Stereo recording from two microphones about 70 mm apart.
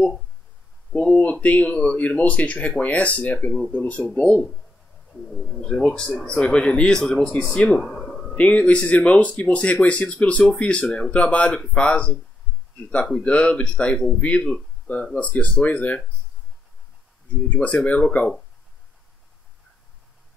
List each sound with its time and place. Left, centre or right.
0.9 s speech: left
5.3 s speech: centre
7.8 s a sound: centre
8.4 s speech: centre
17.5 s speech: left